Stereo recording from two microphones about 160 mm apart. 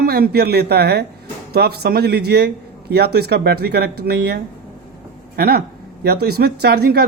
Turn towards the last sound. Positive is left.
turn(degrees=-75)  # may be behind; listen again after turning